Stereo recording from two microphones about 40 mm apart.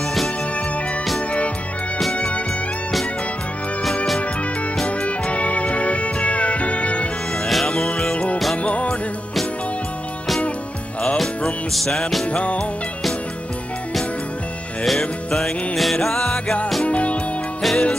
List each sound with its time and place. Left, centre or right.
2.1 s music: left
4.8 s music: left
7.4 s music: centre
8.1 s music: left
11.7 s music: centre
12.3 s music: left
14.9 s music: centre
16.8 s music: left
17.6 s music: centre